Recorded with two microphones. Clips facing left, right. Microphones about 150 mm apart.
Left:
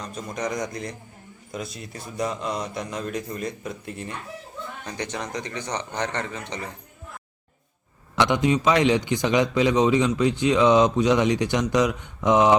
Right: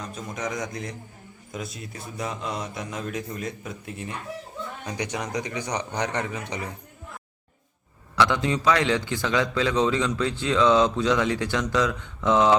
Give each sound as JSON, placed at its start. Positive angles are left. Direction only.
{"t": 0.0, "sound": "a man's voice", "side_deg": -5}
{"t": 8.1, "sound": "a man's voice", "side_deg": 20}